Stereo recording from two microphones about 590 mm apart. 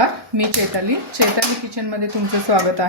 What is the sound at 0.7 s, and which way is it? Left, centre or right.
A woman's voice, right.